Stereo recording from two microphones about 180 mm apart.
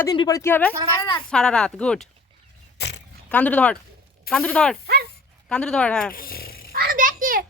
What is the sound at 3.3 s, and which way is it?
A man's voice, 10° left (ahead or behind).